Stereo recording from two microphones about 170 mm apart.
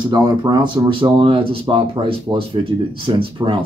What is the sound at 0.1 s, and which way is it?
Speech, 25° right (ahead or behind).